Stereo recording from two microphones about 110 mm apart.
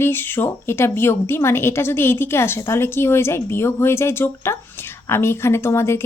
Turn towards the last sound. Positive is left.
turn(degrees=25)  # may be behind; listen again after turning